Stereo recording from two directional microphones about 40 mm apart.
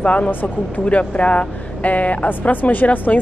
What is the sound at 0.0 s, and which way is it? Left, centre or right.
Speech, left.